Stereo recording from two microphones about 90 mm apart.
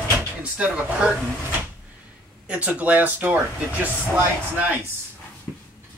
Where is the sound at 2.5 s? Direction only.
15° right (ahead or behind).